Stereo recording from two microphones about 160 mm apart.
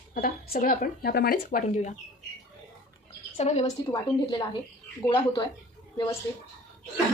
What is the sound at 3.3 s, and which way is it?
Speech, 45° left (ahead or behind).